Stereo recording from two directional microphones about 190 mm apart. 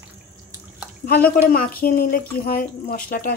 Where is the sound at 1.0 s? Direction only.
50° left (ahead or behind).